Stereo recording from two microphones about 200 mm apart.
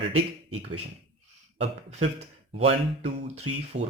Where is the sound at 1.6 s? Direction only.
35° right (ahead or behind).